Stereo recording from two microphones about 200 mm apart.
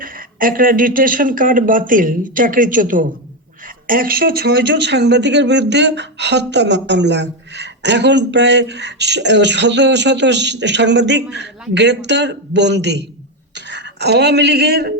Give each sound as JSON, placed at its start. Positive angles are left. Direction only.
{"t": 0.0, "sound": "a woman's voice", "side_deg": -45}